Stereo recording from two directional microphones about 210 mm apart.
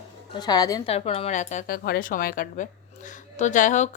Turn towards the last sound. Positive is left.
turn(degrees=35)  # may be behind; listen again after turning